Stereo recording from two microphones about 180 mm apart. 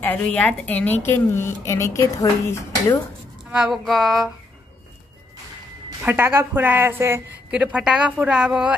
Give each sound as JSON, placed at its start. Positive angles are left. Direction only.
{"t": 0.0, "sound": "speech", "side_deg": 10}
{"t": 3.5, "sound": "speech", "side_deg": 0}
{"t": 6.0, "sound": "a woman's voice", "side_deg": -10}